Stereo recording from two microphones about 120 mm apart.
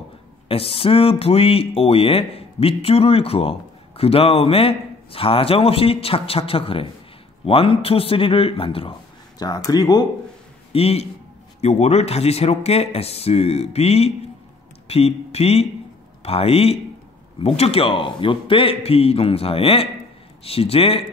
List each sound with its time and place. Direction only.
0.5 s speech: 50° left (ahead or behind)
9.4 s speech: 30° left (ahead or behind)
10.7 s a man's voice: 55° left (ahead or behind)